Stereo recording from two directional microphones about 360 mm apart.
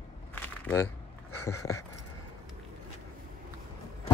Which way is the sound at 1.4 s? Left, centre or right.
Centre.